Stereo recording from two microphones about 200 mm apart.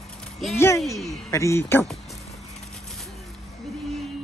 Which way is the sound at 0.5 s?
15° left (ahead or behind).